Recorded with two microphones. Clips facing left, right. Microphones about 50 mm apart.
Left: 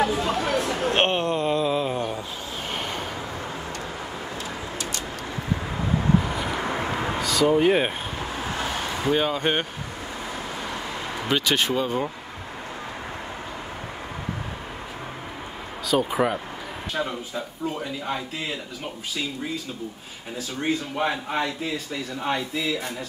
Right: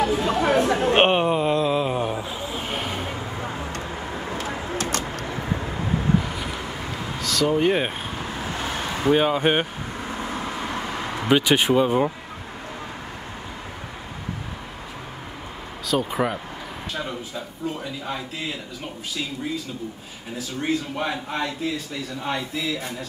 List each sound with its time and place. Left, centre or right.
0.1 s speech: centre
0.4 s a sound: right; by 3.1 s centre
4.7 s bird: right
6.6 s vehicle: left
7.2 s speech: centre
9.0 s speech: centre
11.1 s speech: centre
15.9 s a man's voice: centre
21.0 s a man's voice: centre